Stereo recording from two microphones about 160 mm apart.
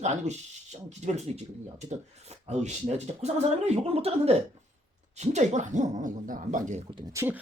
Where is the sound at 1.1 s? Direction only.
45° right (ahead or behind).